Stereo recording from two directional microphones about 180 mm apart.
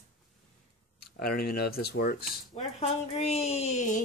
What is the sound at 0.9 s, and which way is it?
Speech, 55° left (ahead or behind).